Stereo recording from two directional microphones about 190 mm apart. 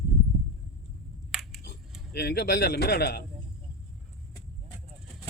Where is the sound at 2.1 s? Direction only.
60° left (ahead or behind).